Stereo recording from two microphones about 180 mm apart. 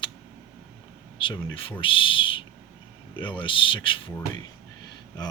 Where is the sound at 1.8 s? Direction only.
30° left (ahead or behind).